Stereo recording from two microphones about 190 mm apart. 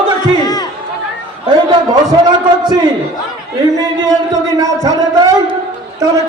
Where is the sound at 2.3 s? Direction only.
20° right (ahead or behind).